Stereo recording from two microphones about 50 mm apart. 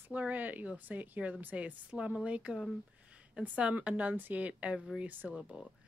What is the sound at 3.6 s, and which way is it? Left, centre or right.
Speech, right.